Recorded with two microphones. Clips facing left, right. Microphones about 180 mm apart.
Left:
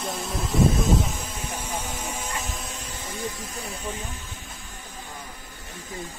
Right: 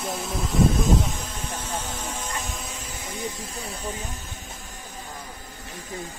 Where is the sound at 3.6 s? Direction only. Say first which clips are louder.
Right 1 dB; 35° right (ahead or behind).